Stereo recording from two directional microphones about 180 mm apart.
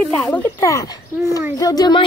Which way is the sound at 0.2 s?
15° left (ahead or behind).